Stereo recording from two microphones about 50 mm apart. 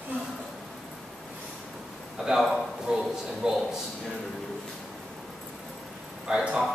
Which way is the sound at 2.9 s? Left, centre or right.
Centre.